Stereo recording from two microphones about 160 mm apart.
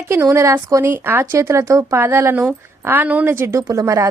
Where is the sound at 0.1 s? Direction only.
15° right (ahead or behind).